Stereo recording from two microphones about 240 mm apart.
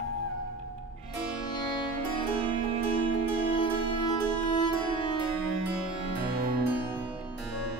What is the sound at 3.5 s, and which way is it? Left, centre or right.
Music, left.